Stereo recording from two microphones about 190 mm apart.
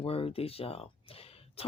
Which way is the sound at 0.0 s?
30° left (ahead or behind).